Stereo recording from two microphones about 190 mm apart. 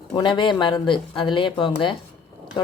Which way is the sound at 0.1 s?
25° left (ahead or behind).